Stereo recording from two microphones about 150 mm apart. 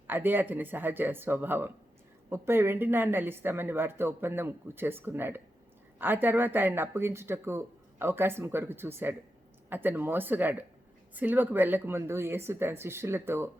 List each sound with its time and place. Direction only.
0.1 s speech: 15° right (ahead or behind)